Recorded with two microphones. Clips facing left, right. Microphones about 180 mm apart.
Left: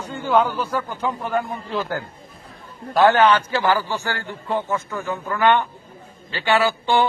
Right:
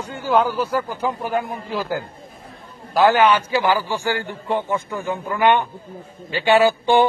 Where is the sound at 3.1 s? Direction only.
15° right (ahead or behind).